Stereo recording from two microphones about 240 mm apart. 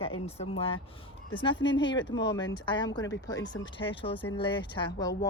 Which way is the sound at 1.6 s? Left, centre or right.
Left.